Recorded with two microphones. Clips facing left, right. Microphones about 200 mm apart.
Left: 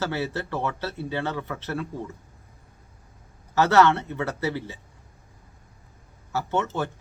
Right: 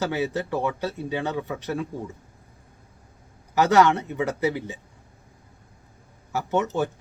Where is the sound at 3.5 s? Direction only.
15° right (ahead or behind).